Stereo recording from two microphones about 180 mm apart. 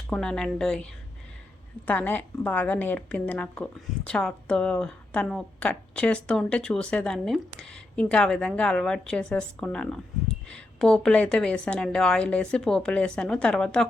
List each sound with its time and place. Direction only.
0.1 s a woman's voice: 5° left (ahead or behind)
1.9 s a woman's voice: 10° left (ahead or behind)